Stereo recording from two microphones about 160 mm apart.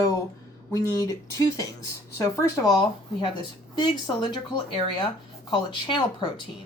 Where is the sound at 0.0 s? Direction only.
20° left (ahead or behind).